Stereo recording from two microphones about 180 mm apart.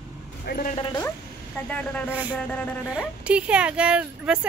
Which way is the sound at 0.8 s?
25° left (ahead or behind).